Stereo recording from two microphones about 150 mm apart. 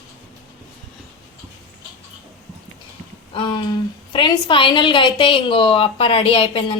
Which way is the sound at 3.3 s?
30° left (ahead or behind).